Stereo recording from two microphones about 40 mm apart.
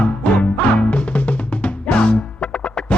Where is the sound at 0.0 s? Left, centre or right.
Left.